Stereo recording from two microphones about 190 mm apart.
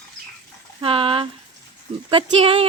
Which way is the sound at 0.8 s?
30° right (ahead or behind).